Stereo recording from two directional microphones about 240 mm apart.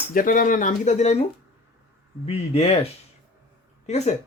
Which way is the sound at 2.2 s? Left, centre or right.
Left.